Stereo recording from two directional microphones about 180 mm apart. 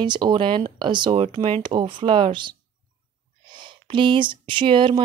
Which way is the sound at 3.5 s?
25° right (ahead or behind).